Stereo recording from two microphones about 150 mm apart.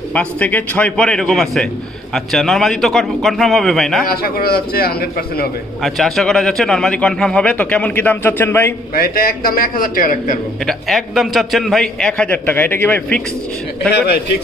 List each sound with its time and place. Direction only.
0.1 s a man's voice: 10° left (ahead or behind)
4.1 s a man's voice: 90° left
5.8 s a man's voice: centre (ahead or behind)
8.9 s a man's voice: 75° left (ahead or behind)
10.6 s a man's voice: centre (ahead or behind)